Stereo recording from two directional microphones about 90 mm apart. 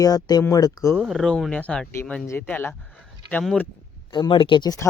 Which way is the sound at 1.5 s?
15° left (ahead or behind).